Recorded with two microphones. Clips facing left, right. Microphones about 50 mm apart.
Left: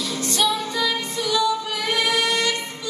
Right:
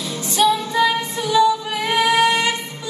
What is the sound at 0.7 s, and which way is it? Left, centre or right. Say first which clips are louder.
Music: right 6 dB; right.